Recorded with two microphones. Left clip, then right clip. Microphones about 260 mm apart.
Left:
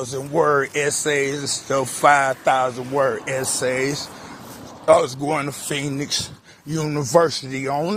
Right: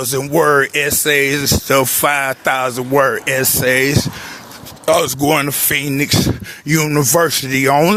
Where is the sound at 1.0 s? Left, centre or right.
Right.